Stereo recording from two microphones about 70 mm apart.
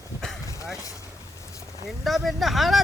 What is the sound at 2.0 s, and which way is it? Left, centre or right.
Speech, centre.